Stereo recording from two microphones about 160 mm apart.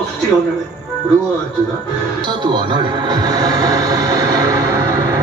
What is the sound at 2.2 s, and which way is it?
Music, 30° right (ahead or behind).